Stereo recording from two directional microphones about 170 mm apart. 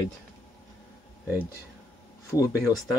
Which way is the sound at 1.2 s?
10° right (ahead or behind).